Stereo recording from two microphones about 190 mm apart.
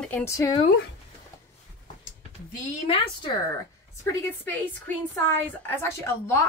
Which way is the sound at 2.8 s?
25° left (ahead or behind).